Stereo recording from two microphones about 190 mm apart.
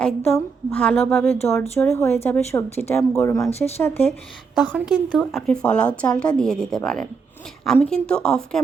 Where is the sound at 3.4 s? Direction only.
35° left (ahead or behind).